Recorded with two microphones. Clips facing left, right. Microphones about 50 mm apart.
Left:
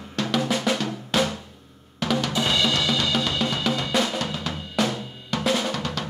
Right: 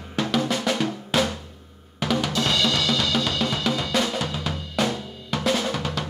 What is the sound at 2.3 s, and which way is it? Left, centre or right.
Drum kit, centre.